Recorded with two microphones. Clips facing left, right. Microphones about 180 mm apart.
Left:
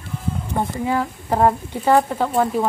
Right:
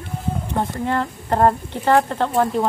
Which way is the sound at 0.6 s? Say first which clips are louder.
Left 1 dB; 5° left (ahead or behind).